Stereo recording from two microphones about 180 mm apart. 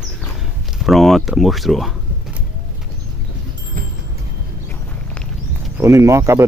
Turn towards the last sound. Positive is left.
turn(degrees=-15)  # may be behind; listen again after turning